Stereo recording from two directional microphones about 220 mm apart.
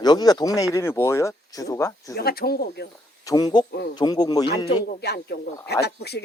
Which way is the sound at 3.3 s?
20° left (ahead or behind).